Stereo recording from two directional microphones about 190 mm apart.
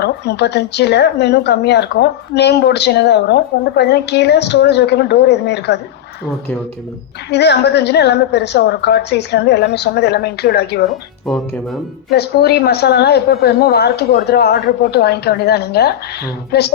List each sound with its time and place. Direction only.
0.0 s speech: 60° left (ahead or behind)
7.3 s speech: 60° left (ahead or behind)
11.3 s speech: centre (ahead or behind)
12.1 s speech: 55° left (ahead or behind)